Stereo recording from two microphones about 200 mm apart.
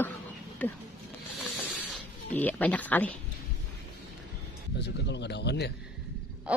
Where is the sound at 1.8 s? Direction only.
10° left (ahead or behind).